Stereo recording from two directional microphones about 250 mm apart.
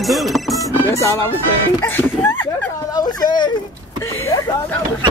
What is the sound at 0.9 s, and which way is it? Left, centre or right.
Speech, centre.